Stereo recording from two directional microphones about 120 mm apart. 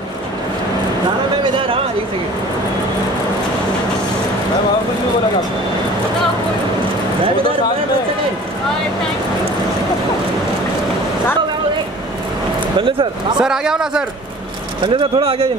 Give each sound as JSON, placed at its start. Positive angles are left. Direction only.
{"t": 12.7, "sound": "speech", "side_deg": -45}
{"t": 13.4, "sound": "a man's voice", "side_deg": -5}
{"t": 14.8, "sound": "speech", "side_deg": -40}